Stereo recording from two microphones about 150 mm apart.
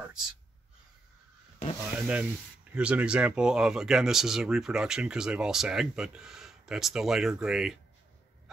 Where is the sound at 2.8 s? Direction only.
5° right (ahead or behind).